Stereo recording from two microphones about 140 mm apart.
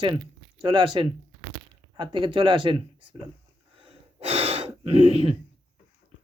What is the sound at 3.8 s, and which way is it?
Gasp, 45° right (ahead or behind).